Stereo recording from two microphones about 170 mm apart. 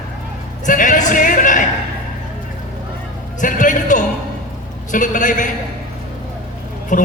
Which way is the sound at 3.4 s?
50° left (ahead or behind).